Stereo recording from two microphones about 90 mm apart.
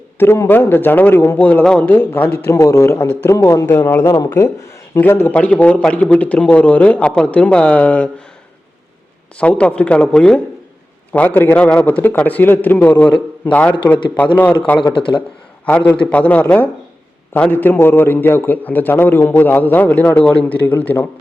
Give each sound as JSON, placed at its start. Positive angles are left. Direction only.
{"t": 0.2, "sound": "a man's voice", "side_deg": 25}
{"t": 4.9, "sound": "a man's voice", "side_deg": 25}
{"t": 9.4, "sound": "a man's voice", "side_deg": 15}
{"t": 14.9, "sound": "speech", "side_deg": 70}
{"t": 15.9, "sound": "a man's voice", "side_deg": 15}